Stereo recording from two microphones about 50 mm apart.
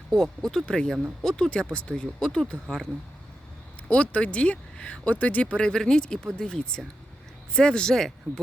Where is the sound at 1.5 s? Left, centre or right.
Centre.